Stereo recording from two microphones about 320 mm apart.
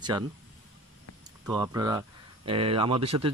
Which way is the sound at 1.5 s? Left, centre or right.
Centre.